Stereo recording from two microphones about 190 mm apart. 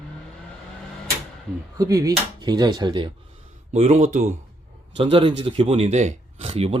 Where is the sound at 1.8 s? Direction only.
20° right (ahead or behind).